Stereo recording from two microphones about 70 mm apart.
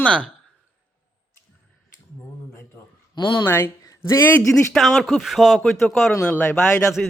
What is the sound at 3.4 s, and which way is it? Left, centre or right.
Speech, left.